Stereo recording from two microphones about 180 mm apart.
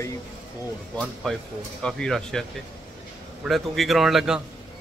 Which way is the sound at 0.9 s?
5° left (ahead or behind).